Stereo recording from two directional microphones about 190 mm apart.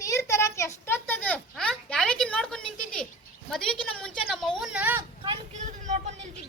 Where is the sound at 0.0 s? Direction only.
15° left (ahead or behind); by 5.0 s 10° right (ahead or behind).